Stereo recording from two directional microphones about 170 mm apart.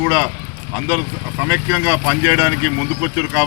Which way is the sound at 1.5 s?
15° right (ahead or behind).